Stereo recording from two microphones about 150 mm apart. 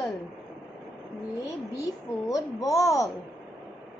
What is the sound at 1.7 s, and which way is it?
A woman's voice, 20° left (ahead or behind).